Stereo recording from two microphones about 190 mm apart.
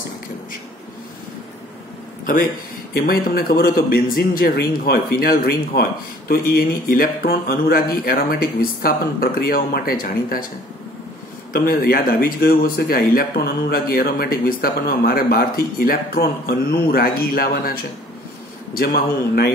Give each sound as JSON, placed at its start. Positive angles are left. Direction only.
{"t": 2.9, "sound": "a man's voice", "side_deg": 55}
{"t": 11.5, "sound": "a man's voice", "side_deg": 50}
{"t": 18.8, "sound": "a man's voice", "side_deg": 55}